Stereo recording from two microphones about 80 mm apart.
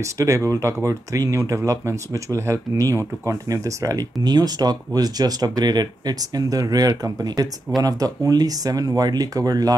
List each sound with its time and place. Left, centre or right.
0.0 s speech: right